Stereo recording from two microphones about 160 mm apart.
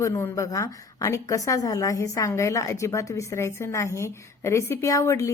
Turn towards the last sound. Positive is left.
turn(degrees=20)  # may be behind; listen again after turning